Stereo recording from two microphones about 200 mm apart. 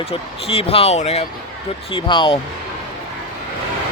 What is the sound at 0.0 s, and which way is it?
Speech, 30° left (ahead or behind).